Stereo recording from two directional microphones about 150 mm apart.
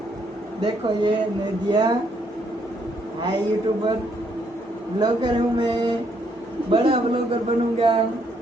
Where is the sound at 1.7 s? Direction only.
30° right (ahead or behind).